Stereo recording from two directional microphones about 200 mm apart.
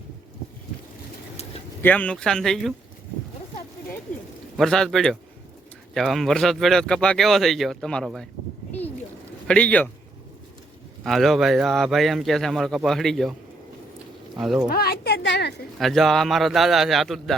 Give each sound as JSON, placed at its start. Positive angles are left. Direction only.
{"t": 1.8, "sound": "speech", "side_deg": 10}
{"t": 4.5, "sound": "speech", "side_deg": 0}
{"t": 9.5, "sound": "speech", "side_deg": 5}
{"t": 11.0, "sound": "speech", "side_deg": 0}
{"t": 14.3, "sound": "speech", "side_deg": 0}
{"t": 14.7, "sound": "a sound", "side_deg": 50}
{"t": 15.8, "sound": "speech", "side_deg": 0}